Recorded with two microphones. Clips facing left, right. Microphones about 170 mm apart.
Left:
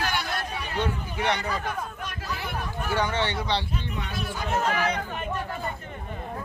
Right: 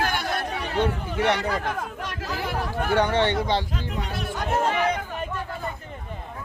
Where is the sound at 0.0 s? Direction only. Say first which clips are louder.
Right 3 dB; 50° right (ahead or behind).